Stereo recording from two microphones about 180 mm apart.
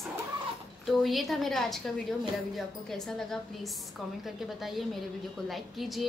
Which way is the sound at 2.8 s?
Centre (ahead or behind).